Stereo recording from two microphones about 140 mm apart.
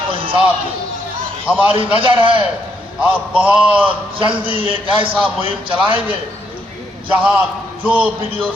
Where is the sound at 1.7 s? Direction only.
40° right (ahead or behind).